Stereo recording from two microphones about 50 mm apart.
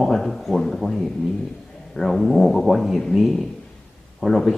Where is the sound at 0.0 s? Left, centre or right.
Centre.